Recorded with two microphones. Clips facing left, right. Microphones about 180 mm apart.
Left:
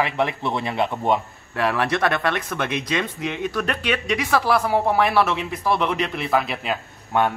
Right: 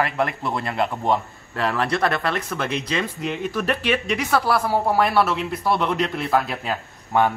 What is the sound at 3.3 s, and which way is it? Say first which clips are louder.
A man's voice: right 3 dB; 5° right (ahead or behind).